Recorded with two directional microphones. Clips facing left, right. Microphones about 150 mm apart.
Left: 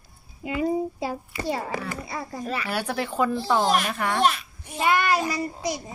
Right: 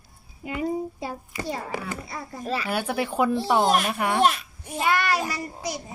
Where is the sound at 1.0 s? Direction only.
90° left.